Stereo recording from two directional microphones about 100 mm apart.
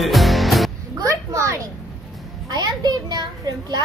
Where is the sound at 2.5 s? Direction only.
45° right (ahead or behind).